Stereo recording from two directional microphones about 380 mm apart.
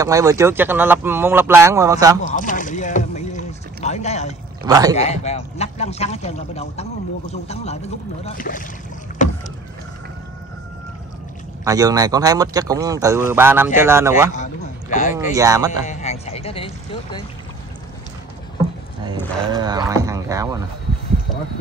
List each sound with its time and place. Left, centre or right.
0.0 s speech: centre
2.2 s boat: left
4.6 s speech: centre
4.9 s a man's voice: centre
9.2 s boat: centre
11.6 s speech: centre
14.3 s speech: centre
15.3 s speech: centre
15.9 s speech: centre
19.5 s speech: centre